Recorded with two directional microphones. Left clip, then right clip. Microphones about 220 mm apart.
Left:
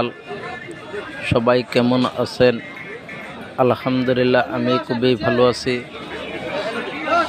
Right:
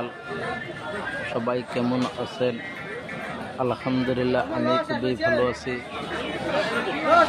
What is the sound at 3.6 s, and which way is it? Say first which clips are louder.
A man's voice: left 8 dB; 25° left (ahead or behind).